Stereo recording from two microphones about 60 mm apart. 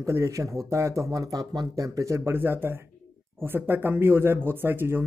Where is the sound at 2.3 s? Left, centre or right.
Right.